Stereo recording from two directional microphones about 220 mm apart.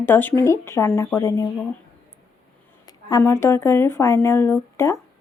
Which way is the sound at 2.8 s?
15° left (ahead or behind).